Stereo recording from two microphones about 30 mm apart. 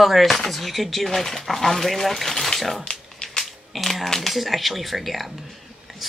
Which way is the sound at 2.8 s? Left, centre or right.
Left.